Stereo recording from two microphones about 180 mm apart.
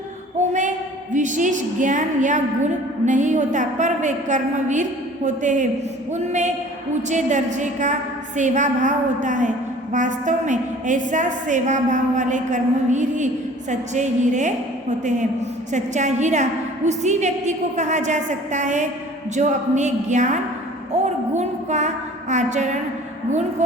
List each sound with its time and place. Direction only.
1.1 s a woman's voice: 45° right (ahead or behind)